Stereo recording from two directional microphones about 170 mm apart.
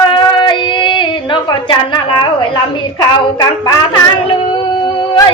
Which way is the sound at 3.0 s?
25° left (ahead or behind).